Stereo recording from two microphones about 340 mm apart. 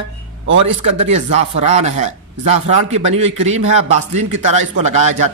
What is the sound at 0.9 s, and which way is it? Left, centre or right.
A man's voice, centre.